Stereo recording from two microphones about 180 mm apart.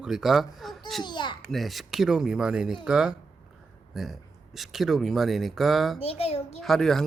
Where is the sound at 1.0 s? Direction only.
25° left (ahead or behind).